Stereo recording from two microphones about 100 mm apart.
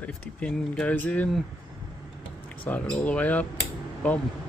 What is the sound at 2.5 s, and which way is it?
Speech, 15° left (ahead or behind).